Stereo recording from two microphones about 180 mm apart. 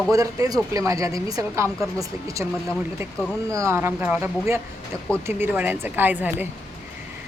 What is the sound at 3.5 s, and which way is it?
Speech, 15° right (ahead or behind).